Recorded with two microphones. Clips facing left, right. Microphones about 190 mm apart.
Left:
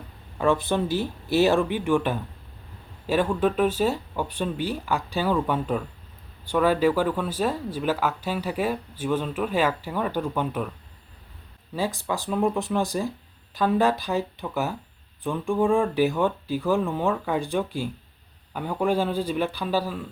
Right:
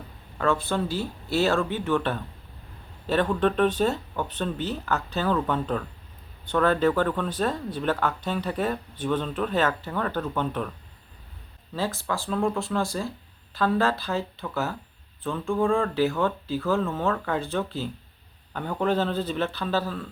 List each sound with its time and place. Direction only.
0.3 s speech: 15° left (ahead or behind)
11.7 s speech: 15° left (ahead or behind)